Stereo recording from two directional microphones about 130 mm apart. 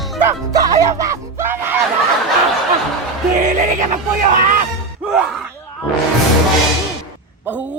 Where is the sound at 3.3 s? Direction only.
75° right (ahead or behind).